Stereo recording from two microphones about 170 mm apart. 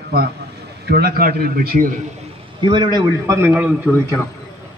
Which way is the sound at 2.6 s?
25° right (ahead or behind).